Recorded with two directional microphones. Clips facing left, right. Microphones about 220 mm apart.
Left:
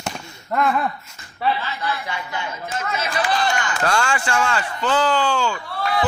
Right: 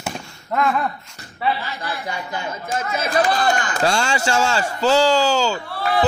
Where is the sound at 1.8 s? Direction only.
45° right (ahead or behind).